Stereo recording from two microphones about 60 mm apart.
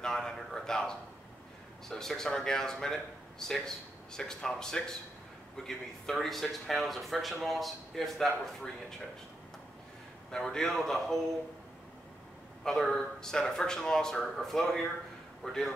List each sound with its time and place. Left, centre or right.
0.0 s a sound: centre
1.9 s speech: centre
10.3 s speech: centre
12.6 s speech: centre